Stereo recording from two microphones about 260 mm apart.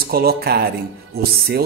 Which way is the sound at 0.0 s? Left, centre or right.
Right.